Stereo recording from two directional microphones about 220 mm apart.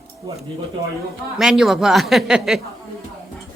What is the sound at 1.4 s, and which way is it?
Speech, centre (ahead or behind).